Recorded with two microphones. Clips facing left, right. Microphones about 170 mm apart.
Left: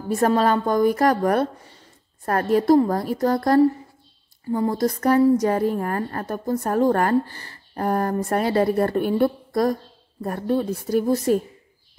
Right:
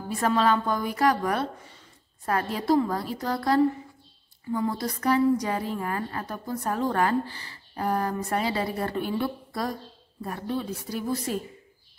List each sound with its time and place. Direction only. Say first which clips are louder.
0.1 s a woman's voice: left 4 dB; 45° left (ahead or behind)